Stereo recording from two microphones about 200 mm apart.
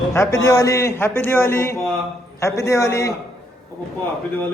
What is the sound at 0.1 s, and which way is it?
A man's voice, 15° left (ahead or behind).